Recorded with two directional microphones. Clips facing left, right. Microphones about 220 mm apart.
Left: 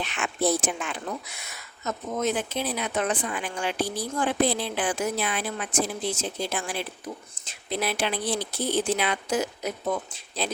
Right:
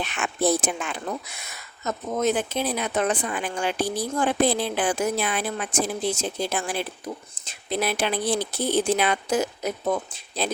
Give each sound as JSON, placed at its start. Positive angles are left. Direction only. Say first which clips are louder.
{"t": 0.0, "sound": "speech", "louder": "right 2 dB", "side_deg": -50}
{"t": 1.8, "sound": "speech", "louder": "right 3 dB", "side_deg": -45}